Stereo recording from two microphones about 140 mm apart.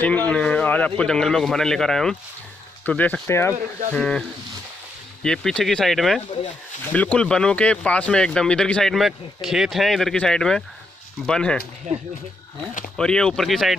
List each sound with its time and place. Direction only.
0.0 s speech: 10° left (ahead or behind)
3.9 s speech: 5° left (ahead or behind)
5.2 s speech: 5° left (ahead or behind)
11.9 s speech: 60° right (ahead or behind)
12.9 s speech: 5° left (ahead or behind)